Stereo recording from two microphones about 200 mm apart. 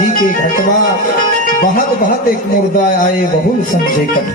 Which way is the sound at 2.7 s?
45° left (ahead or behind).